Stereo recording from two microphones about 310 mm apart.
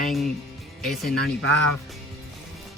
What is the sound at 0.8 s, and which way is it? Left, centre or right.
Speech, centre.